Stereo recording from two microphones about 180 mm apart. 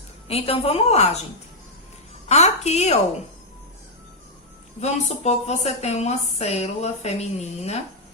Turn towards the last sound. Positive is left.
turn(degrees=35)  # may be behind; listen again after turning